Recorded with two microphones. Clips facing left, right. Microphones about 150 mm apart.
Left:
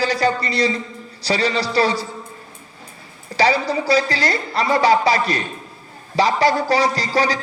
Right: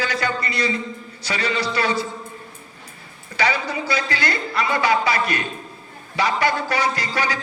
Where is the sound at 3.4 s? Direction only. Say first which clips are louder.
Left 5 dB; 35° left (ahead or behind).